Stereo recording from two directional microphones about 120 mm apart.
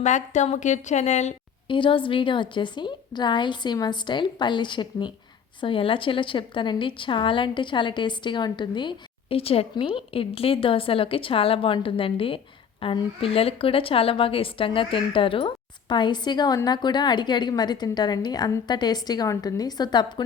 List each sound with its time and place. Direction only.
0.0 s a woman's voice: 80° left
1.6 s a woman's voice: 45° left (ahead or behind)